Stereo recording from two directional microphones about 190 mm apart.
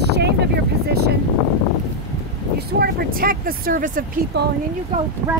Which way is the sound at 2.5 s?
55° right (ahead or behind).